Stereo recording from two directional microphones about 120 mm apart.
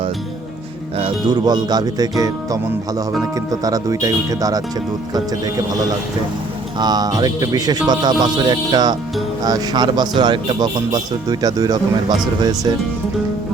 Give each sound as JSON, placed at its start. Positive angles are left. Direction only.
{"t": 1.3, "sound": "speech", "side_deg": -35}
{"t": 6.7, "sound": "speech", "side_deg": -35}